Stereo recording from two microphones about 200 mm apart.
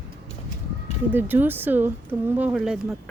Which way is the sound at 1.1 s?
10° right (ahead or behind).